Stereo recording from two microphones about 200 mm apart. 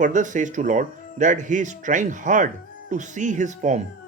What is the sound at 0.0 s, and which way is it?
Speech, 40° right (ahead or behind).